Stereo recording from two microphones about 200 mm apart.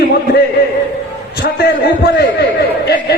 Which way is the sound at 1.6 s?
55° left (ahead or behind).